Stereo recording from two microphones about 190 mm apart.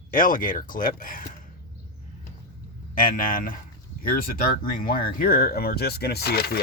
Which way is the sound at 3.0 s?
45° left (ahead or behind).